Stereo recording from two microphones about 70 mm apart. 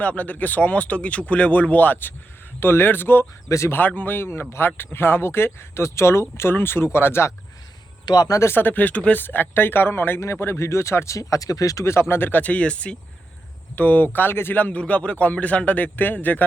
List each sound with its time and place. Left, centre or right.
0.0 s a man's voice: left
8.0 s a man's voice: left
8.3 s speech: left
8.5 s a man's voice: left
11.9 s a man's voice: left